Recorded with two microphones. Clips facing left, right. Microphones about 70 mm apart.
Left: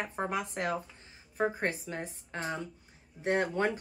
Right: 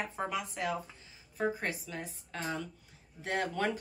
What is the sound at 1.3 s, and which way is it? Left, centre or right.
Speech, left.